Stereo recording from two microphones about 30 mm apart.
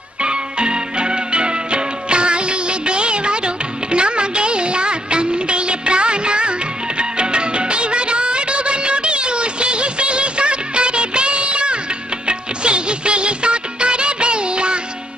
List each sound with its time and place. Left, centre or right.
0.2 s music: right
7.0 s music of bollywood: right
12.3 s music: right